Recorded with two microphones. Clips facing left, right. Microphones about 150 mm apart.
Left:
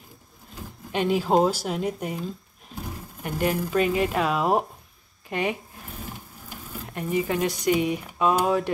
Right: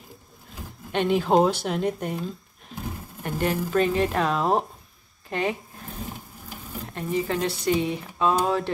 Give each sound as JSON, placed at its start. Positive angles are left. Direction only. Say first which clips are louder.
{"t": 0.9, "sound": "a woman's voice", "louder": "right 1 dB", "side_deg": 5}
{"t": 3.3, "sound": "speech", "louder": "even", "side_deg": 10}
{"t": 6.9, "sound": "speech", "louder": "left 1 dB", "side_deg": 15}